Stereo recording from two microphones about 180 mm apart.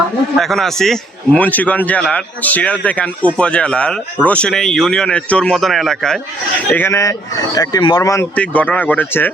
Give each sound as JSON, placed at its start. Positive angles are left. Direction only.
{"t": 0.3, "sound": "a man's voice", "side_deg": 0}